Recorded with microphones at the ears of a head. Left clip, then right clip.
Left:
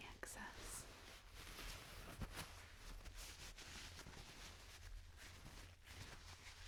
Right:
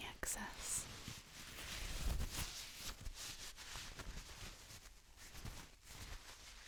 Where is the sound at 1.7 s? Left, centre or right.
Right.